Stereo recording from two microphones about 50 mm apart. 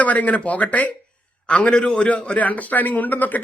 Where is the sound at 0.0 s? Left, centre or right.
Left.